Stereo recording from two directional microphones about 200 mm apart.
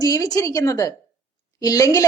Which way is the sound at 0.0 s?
20° left (ahead or behind).